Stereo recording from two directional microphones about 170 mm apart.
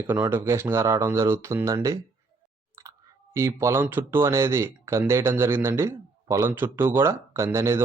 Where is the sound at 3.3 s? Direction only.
15° right (ahead or behind).